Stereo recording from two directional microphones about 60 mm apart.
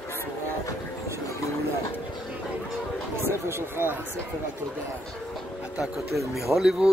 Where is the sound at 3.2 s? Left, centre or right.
Right.